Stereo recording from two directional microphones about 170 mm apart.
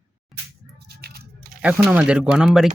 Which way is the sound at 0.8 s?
65° right (ahead or behind).